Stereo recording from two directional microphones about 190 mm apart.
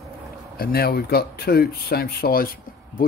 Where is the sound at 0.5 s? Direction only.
55° left (ahead or behind).